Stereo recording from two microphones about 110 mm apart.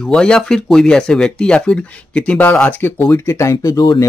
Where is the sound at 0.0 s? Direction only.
10° left (ahead or behind).